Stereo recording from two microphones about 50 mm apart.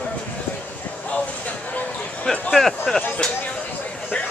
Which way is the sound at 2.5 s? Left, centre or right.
Centre.